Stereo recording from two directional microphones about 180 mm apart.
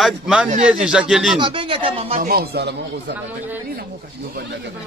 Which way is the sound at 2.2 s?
55° right (ahead or behind).